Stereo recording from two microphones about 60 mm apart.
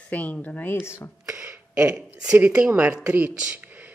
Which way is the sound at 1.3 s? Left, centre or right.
Right.